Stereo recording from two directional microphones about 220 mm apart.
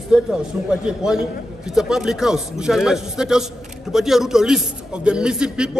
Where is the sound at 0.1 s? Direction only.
5° right (ahead or behind).